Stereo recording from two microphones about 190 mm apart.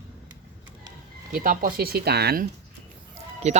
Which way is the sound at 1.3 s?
50° right (ahead or behind).